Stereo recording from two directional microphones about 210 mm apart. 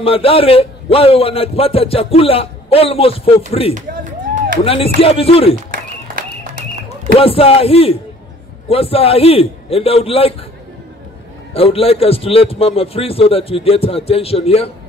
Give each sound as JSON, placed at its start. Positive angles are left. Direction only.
{"t": 0.0, "sound": "a man's voice", "side_deg": 25}
{"t": 3.7, "sound": "a sound", "side_deg": -35}
{"t": 4.6, "sound": "a man's voice", "side_deg": 25}
{"t": 5.7, "sound": "a sound", "side_deg": -40}
{"t": 7.2, "sound": "a man's voice", "side_deg": 25}
{"t": 11.5, "sound": "a man's voice", "side_deg": 25}